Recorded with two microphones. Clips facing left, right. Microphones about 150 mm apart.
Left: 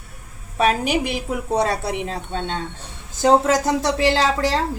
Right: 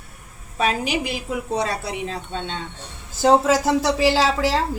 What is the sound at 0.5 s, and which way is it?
Speech, 50° left (ahead or behind).